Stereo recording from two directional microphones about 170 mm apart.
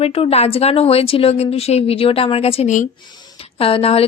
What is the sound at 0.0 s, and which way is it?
A woman's voice, 35° left (ahead or behind).